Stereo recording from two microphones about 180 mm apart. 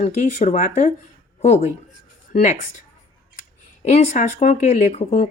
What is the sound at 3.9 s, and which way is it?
Speech, 40° left (ahead or behind).